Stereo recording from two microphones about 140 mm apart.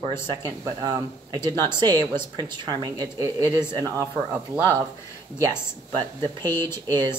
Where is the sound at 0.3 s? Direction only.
25° right (ahead or behind).